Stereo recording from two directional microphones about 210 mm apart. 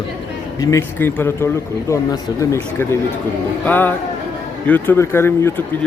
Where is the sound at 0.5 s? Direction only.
10° left (ahead or behind).